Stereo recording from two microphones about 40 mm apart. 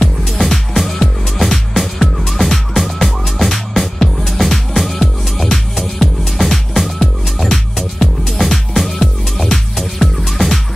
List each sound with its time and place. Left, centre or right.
0.0 s music: centre